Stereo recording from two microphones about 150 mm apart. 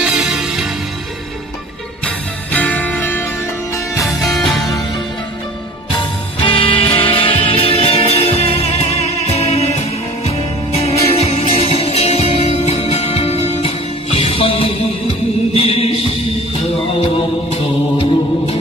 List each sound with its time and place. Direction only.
0.0 s music: 5° right (ahead or behind)
2.5 s music: 10° left (ahead or behind)
4.1 s music: centre (ahead or behind)
5.9 s music: 35° left (ahead or behind)